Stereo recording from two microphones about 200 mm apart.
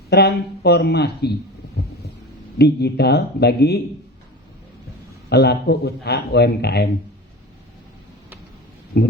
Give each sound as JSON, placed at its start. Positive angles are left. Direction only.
{"t": 0.1, "sound": "speech", "side_deg": 55}
{"t": 2.6, "sound": "a man's voice", "side_deg": 55}
{"t": 5.3, "sound": "a man's voice", "side_deg": 55}
{"t": 8.9, "sound": "speech", "side_deg": 50}